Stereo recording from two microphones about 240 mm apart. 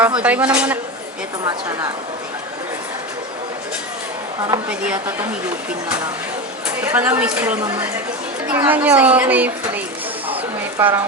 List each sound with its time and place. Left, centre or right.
0.2 s a woman's voice: centre
4.4 s a woman's voice: centre
6.9 s a child's voice: centre